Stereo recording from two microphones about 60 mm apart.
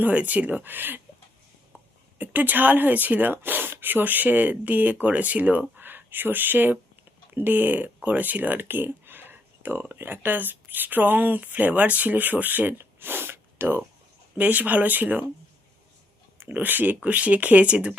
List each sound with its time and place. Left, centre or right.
0.0 s speech: right
2.1 s speech: right
12.7 s snort: right
14.3 s speech: right
16.4 s speech: right